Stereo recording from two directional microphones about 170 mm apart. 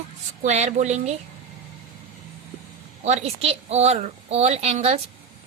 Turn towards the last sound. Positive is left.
turn(degrees=-40)  # may be behind; listen again after turning